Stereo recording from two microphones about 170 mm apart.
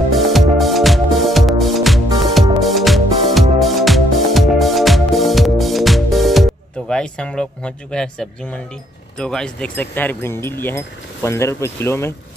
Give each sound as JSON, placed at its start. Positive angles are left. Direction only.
{"t": 0.1, "sound": "music", "side_deg": 0}
{"t": 9.2, "sound": "speech", "side_deg": 5}